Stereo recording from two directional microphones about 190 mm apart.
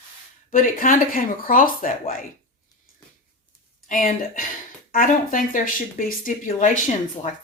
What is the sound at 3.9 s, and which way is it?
A woman's voice, 45° left (ahead or behind).